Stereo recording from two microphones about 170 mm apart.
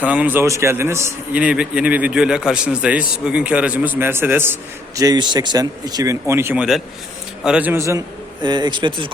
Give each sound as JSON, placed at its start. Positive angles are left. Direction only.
{"t": 0.0, "sound": "a man's voice", "side_deg": -10}
{"t": 4.9, "sound": "a man's voice", "side_deg": -25}